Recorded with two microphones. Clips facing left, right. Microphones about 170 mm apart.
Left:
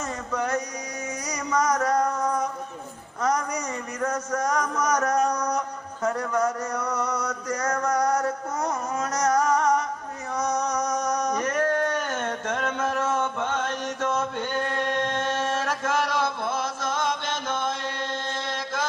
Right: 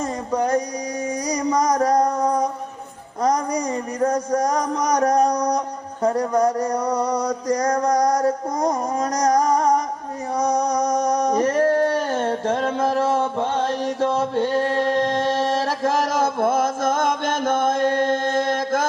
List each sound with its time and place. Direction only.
0.0 s a sound: 35° right (ahead or behind)
3.2 s speech: 35° right (ahead or behind)
10.3 s singing: 35° right (ahead or behind); by 18.9 s 50° right (ahead or behind)